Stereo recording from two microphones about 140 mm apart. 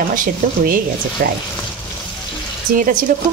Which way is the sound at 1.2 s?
90° right.